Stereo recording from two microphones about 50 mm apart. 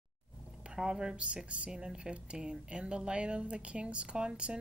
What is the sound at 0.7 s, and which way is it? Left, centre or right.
A woman's voice, centre.